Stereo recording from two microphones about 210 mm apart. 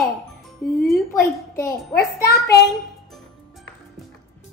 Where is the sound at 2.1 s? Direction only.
50° left (ahead or behind).